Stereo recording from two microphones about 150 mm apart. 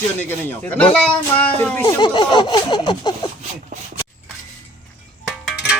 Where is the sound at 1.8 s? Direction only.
30° left (ahead or behind).